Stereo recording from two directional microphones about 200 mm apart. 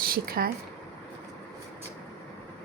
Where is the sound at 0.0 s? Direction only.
45° right (ahead or behind).